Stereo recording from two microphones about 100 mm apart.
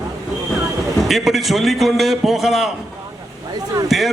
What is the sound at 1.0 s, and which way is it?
A man's voice, centre (ahead or behind).